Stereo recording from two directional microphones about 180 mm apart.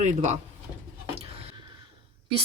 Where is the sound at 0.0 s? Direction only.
40° right (ahead or behind).